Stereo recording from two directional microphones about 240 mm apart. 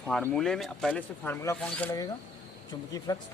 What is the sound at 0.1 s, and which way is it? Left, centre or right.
Speech, centre.